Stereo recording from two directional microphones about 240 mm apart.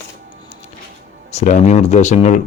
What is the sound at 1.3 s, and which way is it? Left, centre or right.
Speech, left.